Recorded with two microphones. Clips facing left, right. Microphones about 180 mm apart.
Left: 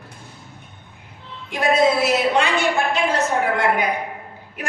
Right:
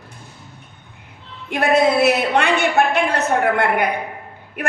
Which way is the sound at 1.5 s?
65° right (ahead or behind).